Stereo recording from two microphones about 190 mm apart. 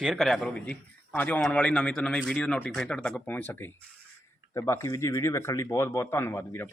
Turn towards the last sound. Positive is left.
turn(degrees=10)  # may be behind; listen again after turning